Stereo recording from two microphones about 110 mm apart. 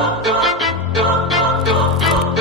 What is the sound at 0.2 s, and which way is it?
Music, centre (ahead or behind).